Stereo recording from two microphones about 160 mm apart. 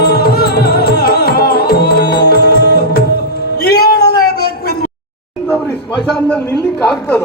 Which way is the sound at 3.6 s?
80° left.